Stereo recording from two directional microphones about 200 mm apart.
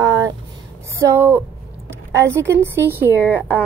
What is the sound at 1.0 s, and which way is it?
A woman's voice, 10° right (ahead or behind).